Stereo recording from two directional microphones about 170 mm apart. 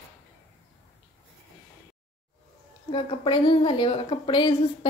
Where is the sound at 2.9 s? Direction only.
30° left (ahead or behind).